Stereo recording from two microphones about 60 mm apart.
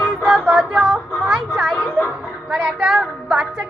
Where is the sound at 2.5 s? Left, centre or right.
Centre.